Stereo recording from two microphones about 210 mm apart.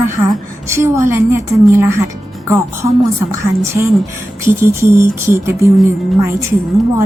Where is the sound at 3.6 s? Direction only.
15° right (ahead or behind).